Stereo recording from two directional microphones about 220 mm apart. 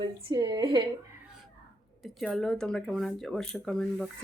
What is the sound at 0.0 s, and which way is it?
Speech, 20° right (ahead or behind).